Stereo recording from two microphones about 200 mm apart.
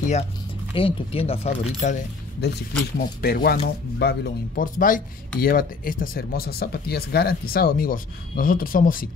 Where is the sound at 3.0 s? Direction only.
50° left (ahead or behind).